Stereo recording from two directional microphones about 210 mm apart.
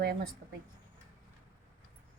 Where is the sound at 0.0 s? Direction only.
45° right (ahead or behind).